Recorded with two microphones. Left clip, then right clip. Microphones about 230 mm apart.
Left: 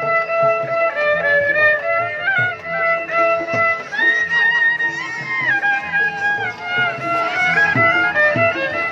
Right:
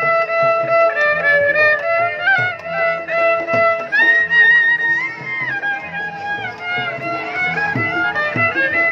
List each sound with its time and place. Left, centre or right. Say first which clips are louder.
0.2 s music: right 1 dB; right
7.5 s music: left 5 dB; centre